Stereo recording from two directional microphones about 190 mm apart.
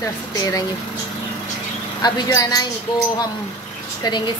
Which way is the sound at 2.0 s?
20° left (ahead or behind).